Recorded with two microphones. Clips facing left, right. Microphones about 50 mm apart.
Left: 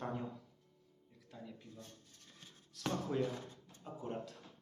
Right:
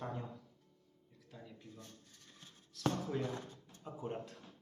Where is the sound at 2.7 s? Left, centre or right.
Centre.